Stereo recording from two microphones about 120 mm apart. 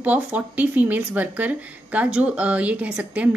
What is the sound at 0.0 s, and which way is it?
Speech, 10° right (ahead or behind).